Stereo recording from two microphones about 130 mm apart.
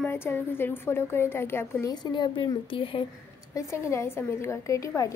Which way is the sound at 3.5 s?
20° left (ahead or behind).